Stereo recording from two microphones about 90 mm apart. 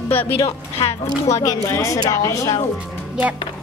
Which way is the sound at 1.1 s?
40° left (ahead or behind).